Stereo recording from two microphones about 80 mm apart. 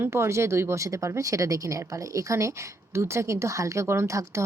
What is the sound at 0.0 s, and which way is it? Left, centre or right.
Speech, right.